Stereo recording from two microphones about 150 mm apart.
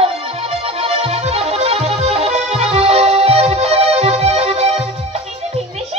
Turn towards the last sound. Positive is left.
turn(degrees=-40)  # may be behind; listen again after turning